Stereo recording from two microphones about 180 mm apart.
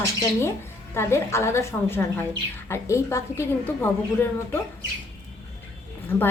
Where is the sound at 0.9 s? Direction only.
15° left (ahead or behind).